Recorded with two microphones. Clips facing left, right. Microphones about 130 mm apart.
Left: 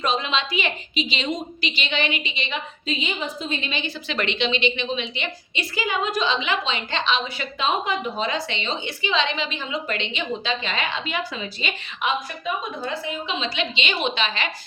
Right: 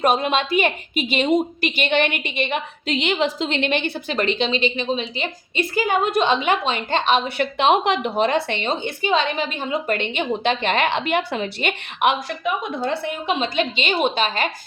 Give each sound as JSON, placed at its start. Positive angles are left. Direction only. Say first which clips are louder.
{"t": 0.0, "sound": "a woman's voice", "louder": "right 5 dB", "side_deg": -55}
{"t": 4.1, "sound": "a woman's voice", "louder": "right 3 dB", "side_deg": -40}